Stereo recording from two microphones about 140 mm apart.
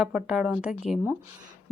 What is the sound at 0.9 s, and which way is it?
Speech, 60° left (ahead or behind).